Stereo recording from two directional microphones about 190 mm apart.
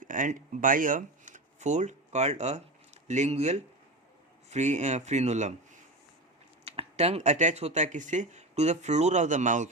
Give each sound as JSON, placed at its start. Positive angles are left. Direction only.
{"t": 0.0, "sound": "speech", "side_deg": -45}
{"t": 6.7, "sound": "speech", "side_deg": -35}